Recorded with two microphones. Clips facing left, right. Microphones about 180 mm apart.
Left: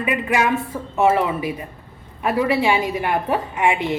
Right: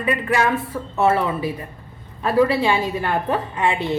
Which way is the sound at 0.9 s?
15° left (ahead or behind).